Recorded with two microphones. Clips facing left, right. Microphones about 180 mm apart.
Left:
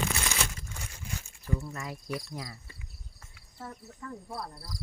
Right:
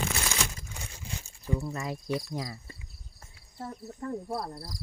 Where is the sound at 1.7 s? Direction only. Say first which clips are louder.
Right 5 dB; 25° right (ahead or behind).